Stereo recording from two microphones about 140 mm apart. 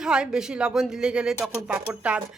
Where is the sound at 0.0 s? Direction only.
5° right (ahead or behind).